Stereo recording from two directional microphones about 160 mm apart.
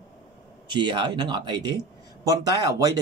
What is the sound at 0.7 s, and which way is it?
Speech, 30° right (ahead or behind).